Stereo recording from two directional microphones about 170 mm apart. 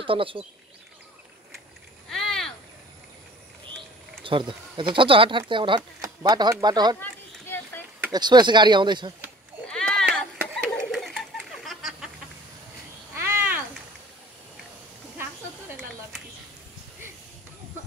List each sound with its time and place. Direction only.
0.0 s speech: 30° right (ahead or behind)
2.0 s rowboat: centre (ahead or behind)
4.2 s speech: 30° right (ahead or behind)
7.0 s a sound: 10° left (ahead or behind)
8.1 s speech: 25° right (ahead or behind)
9.7 s a sound: 5° left (ahead or behind)
13.1 s cat: 15° right (ahead or behind)